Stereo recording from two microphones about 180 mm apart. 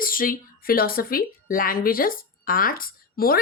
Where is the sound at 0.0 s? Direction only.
50° left (ahead or behind).